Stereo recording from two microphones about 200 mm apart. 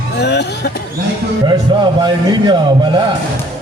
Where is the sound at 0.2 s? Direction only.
55° left (ahead or behind).